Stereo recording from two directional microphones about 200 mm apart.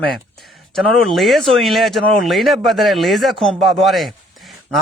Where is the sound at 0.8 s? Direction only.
Centre (ahead or behind).